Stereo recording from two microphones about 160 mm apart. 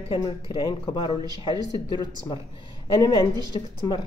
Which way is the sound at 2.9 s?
20° left (ahead or behind).